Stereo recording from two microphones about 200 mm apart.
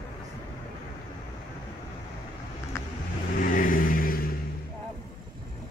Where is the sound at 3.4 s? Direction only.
40° left (ahead or behind).